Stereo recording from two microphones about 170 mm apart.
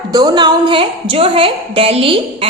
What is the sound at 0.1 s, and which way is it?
A woman's voice, 25° right (ahead or behind).